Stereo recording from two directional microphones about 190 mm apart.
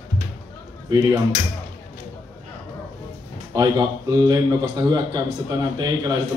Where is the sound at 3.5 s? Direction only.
20° right (ahead or behind).